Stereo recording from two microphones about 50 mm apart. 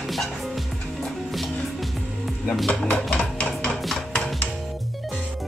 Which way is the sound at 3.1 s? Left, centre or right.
Centre.